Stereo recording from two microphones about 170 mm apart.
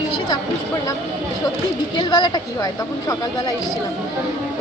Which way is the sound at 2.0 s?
25° left (ahead or behind).